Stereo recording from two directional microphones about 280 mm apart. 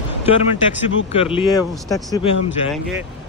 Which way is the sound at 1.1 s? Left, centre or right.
Centre.